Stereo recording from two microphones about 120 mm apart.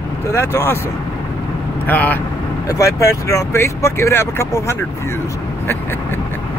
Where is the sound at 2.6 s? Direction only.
25° left (ahead or behind).